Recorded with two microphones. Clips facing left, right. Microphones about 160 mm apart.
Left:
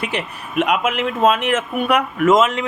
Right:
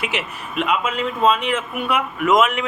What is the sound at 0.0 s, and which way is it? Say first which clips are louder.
Speech: left 2 dB; 5° right (ahead or behind).